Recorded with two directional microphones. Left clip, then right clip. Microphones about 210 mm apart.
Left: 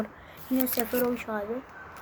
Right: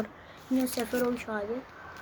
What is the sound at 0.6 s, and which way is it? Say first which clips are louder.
Speech: left 2 dB; 25° left (ahead or behind).